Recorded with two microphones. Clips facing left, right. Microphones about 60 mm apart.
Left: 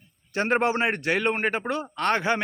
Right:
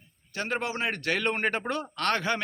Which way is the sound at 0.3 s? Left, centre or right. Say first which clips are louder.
Left 8 dB; left.